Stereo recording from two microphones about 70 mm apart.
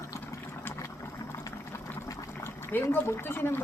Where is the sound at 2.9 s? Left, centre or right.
Left.